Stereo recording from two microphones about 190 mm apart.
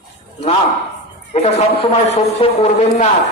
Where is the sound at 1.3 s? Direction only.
35° left (ahead or behind).